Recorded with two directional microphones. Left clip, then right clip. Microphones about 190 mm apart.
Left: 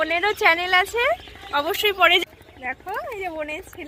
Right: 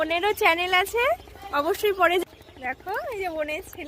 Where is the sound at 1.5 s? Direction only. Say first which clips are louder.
Left 2 dB; 30° right (ahead or behind).